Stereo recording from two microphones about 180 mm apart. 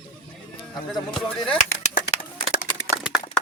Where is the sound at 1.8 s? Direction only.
40° left (ahead or behind).